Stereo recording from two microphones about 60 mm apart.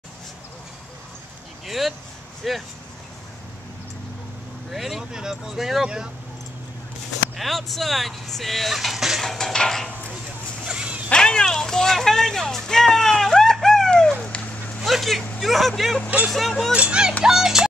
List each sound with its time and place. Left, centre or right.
1.7 s speech: centre
4.6 s speech: centre
7.3 s speech: centre
9.2 s a sound: centre
10.6 s dog: centre
11.1 s a sound: centre
14.2 s a sound: centre
14.8 s vehicle: centre
15.4 s speech: centre
16.7 s speech: centre